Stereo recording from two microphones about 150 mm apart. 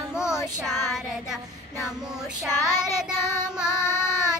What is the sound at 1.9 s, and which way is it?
Female singing, 5° right (ahead or behind).